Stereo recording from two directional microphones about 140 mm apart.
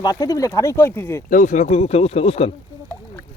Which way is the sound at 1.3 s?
65° left (ahead or behind).